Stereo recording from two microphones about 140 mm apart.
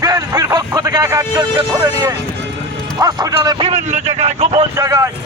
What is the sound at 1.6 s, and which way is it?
Speech, 30° right (ahead or behind).